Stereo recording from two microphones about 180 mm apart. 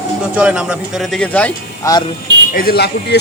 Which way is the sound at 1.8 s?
15° left (ahead or behind).